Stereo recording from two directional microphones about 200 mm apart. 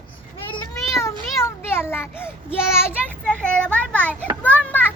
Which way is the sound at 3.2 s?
5° left (ahead or behind).